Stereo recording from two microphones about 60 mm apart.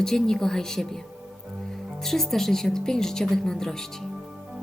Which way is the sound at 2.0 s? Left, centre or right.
Centre.